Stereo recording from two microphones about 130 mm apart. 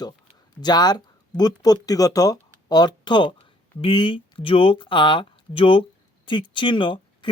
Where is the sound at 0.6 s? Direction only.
30° left (ahead or behind).